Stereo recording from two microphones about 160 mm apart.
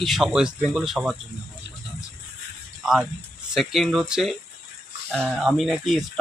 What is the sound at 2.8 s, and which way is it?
Speech, 5° right (ahead or behind).